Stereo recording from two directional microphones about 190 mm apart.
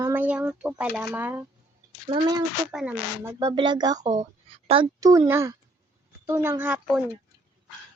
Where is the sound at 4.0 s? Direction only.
40° right (ahead or behind).